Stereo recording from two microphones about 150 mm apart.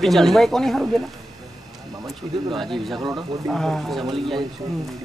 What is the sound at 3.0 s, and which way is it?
Speech, 30° right (ahead or behind).